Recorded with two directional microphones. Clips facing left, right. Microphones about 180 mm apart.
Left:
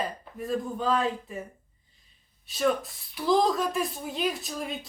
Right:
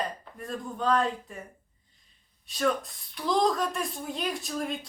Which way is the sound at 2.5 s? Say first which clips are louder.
Left 2 dB; 5° left (ahead or behind).